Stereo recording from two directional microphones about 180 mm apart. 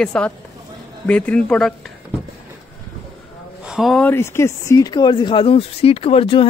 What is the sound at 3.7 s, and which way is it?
Speech, centre (ahead or behind).